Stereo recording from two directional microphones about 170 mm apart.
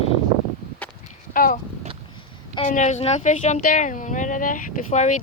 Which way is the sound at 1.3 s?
55° left (ahead or behind).